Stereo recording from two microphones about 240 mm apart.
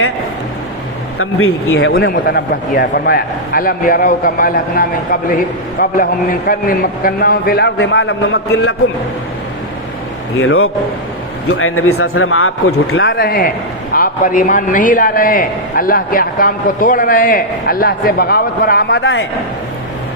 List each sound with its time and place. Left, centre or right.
1.2 s speech: left
1.9 s a man's voice: left
10.4 s speech: left
13.0 s a man's voice: left